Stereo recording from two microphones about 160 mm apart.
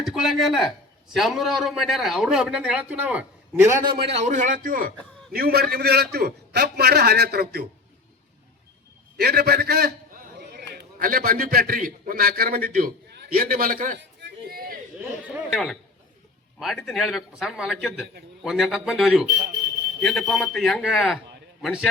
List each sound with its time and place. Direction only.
0.0 s speech: centre (ahead or behind)
3.8 s a man's voice: 35° right (ahead or behind); by 4.9 s 60° right (ahead or behind)
5.3 s a man's voice: 70° right (ahead or behind)
9.1 s a man's voice: 80° right
15.2 s a sound: 5° right (ahead or behind)
16.6 s speech: centre (ahead or behind)